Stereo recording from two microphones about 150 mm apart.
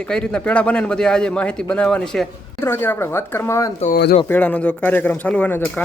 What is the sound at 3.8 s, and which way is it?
Speech, 75° left (ahead or behind).